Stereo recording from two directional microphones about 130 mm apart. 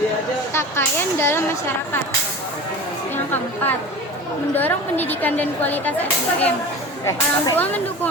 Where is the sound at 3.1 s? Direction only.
15° left (ahead or behind).